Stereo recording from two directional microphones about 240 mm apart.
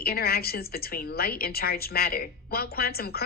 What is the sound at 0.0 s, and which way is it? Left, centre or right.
A woman's voice, left.